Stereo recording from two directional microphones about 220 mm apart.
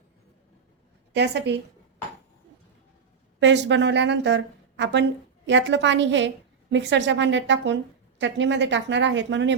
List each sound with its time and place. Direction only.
1.1 s a woman's voice: 50° right (ahead or behind)
3.4 s a woman's voice: 55° right (ahead or behind)